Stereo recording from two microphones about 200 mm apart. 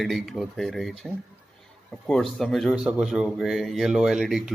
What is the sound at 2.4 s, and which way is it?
Speech, centre (ahead or behind).